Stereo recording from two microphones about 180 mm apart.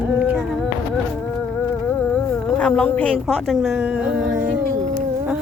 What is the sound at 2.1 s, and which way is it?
A woman's voice, 5° left (ahead or behind).